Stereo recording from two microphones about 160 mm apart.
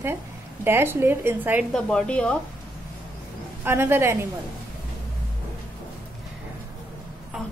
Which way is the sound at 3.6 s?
15° right (ahead or behind).